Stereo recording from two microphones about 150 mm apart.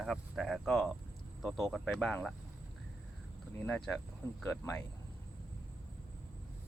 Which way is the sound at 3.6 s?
10° left (ahead or behind).